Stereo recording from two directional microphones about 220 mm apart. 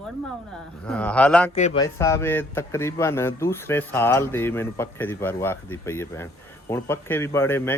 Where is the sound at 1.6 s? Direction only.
30° left (ahead or behind).